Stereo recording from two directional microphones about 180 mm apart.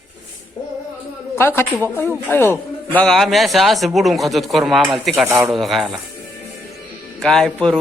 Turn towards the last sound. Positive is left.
turn(degrees=5)  # may be behind; listen again after turning